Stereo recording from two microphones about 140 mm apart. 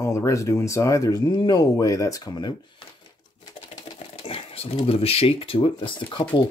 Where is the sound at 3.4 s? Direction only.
40° left (ahead or behind).